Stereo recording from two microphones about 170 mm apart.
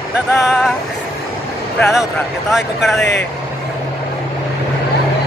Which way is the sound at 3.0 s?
90° left.